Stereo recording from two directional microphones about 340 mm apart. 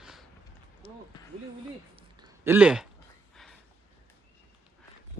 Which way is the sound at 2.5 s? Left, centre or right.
Centre.